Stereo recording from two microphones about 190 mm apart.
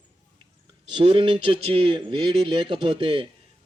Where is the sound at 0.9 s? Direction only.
30° right (ahead or behind).